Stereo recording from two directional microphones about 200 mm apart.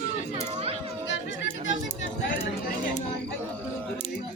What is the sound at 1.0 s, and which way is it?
Chatter, 60° left (ahead or behind).